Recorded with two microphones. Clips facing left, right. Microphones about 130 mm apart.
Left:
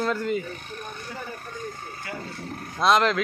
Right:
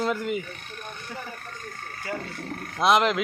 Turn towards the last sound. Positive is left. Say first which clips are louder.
# even
turn(degrees=-15)  # may be behind; listen again after turning